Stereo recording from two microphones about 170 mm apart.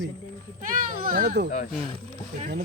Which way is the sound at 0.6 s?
50° right (ahead or behind).